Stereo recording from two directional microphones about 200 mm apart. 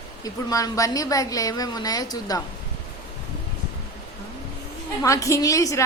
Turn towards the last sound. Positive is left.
turn(degrees=15)  # may be behind; listen again after turning